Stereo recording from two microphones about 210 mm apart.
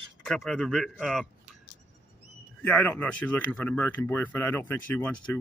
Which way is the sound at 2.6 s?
5° left (ahead or behind).